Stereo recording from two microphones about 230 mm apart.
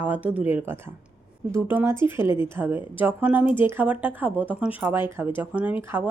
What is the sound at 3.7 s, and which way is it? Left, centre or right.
A woman's voice, centre.